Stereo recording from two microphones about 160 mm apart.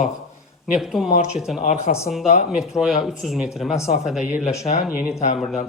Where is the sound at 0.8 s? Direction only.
Centre (ahead or behind).